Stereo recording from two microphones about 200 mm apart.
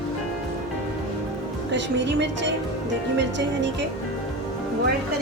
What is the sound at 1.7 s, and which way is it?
A woman's voice, 60° right (ahead or behind).